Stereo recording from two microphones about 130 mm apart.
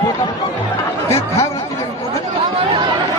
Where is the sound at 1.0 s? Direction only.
20° left (ahead or behind).